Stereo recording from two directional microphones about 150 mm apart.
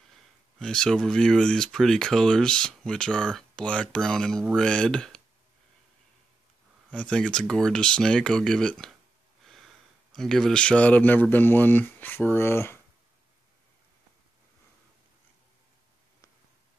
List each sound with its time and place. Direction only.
0.1 s speech: 5° left (ahead or behind)
6.9 s speech: 5° left (ahead or behind)
9.4 s a sound: centre (ahead or behind)
10.1 s speech: 5° left (ahead or behind)